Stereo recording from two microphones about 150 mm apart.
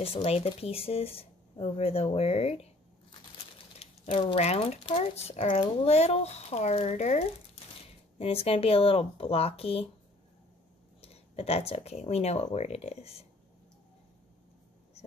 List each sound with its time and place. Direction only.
0.0 s speech: 40° left (ahead or behind)
11.0 s speech: 40° left (ahead or behind)